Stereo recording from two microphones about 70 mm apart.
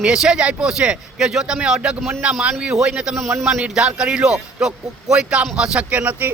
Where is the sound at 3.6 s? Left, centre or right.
Centre.